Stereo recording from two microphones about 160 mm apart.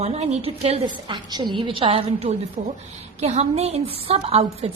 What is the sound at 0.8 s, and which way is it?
A woman's voice, 30° right (ahead or behind).